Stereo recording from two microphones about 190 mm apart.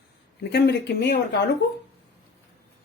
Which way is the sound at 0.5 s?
60° left (ahead or behind).